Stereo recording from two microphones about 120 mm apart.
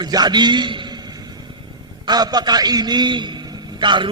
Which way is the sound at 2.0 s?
35° right (ahead or behind).